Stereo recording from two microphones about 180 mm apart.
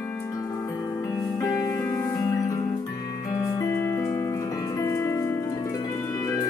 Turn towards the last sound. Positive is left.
turn(degrees=15)  # may be behind; listen again after turning